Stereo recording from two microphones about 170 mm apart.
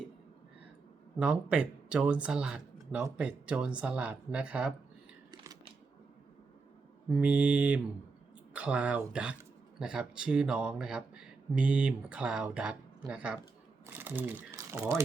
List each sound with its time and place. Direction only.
1.2 s speech: 5° right (ahead or behind)
5.3 s a sound: 20° right (ahead or behind)
7.1 s speech: 10° right (ahead or behind)